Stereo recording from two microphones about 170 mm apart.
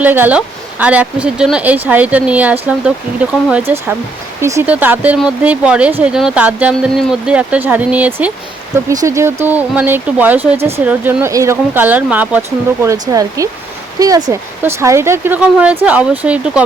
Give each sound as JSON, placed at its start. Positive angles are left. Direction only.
{"t": 0.0, "sound": "speech", "side_deg": -10}
{"t": 8.9, "sound": "speech", "side_deg": -20}